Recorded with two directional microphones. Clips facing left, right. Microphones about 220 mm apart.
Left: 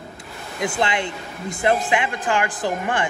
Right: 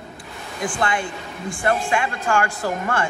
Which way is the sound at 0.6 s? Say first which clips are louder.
Left 1 dB; 20° left (ahead or behind).